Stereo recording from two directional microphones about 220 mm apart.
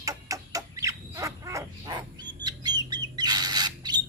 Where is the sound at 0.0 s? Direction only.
15° right (ahead or behind).